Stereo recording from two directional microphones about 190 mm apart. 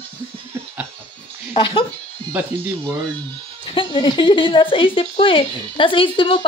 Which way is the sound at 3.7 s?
25° left (ahead or behind).